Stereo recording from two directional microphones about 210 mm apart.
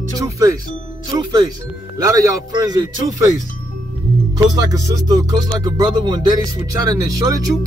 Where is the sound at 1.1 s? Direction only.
20° right (ahead or behind).